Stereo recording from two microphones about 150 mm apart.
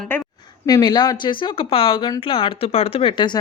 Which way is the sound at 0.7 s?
25° left (ahead or behind).